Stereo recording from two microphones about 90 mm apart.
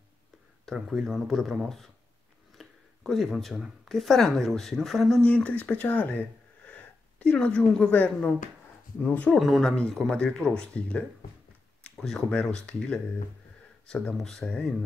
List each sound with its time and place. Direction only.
0.7 s speech: 5° right (ahead or behind)
2.5 s a sound: centre (ahead or behind)
3.9 s speech: centre (ahead or behind)
5.2 s speech: 15° left (ahead or behind)
9.4 s speech: centre (ahead or behind)